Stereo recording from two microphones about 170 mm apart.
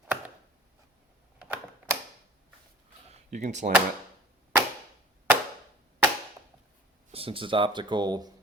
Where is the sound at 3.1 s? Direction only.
45° right (ahead or behind).